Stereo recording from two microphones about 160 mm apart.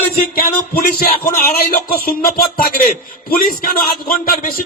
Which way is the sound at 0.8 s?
65° left (ahead or behind).